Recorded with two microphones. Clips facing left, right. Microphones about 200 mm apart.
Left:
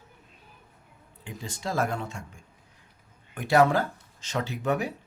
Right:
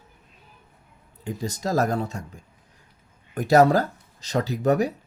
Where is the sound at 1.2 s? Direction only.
40° right (ahead or behind).